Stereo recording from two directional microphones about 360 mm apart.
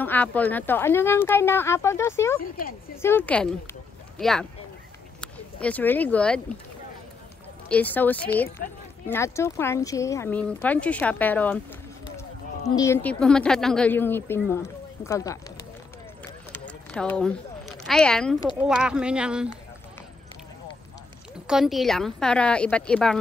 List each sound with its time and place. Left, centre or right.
0.0 s speech: centre
7.6 s speech: centre
12.6 s speech: centre
16.5 s a sound: centre
18.6 s speech: centre
21.5 s speech: centre